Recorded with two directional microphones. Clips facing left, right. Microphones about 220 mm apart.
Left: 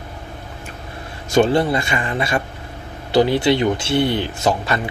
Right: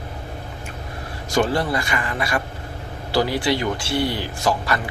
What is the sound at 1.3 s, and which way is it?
Speech, 25° left (ahead or behind).